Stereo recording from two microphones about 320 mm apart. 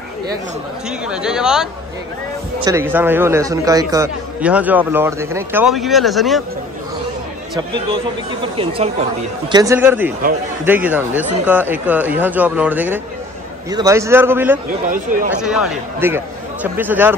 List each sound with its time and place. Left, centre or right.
0.8 s a man's voice: centre
7.5 s a man's voice: centre